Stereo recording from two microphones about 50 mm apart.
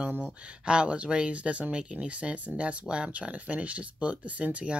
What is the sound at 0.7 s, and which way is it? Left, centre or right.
Speech, right.